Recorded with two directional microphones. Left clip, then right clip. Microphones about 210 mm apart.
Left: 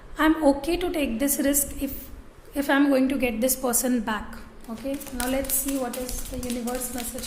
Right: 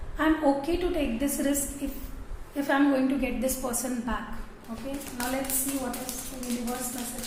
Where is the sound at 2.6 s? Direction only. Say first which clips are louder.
Left 3 dB; 50° left (ahead or behind).